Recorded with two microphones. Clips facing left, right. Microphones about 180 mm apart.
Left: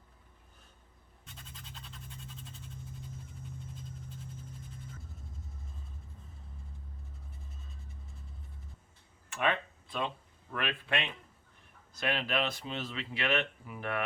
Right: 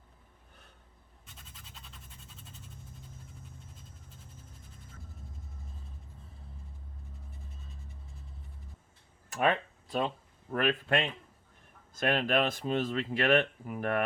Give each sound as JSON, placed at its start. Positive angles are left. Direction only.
{"t": 1.2, "sound": "scratch", "side_deg": -5}
{"t": 9.3, "sound": "a sound", "side_deg": -40}
{"t": 10.5, "sound": "speech", "side_deg": -40}